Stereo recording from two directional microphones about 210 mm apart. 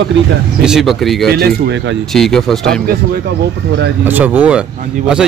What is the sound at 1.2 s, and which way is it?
Speech, 50° right (ahead or behind).